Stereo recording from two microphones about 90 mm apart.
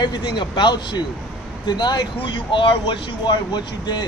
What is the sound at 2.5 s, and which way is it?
Speech, 65° left (ahead or behind).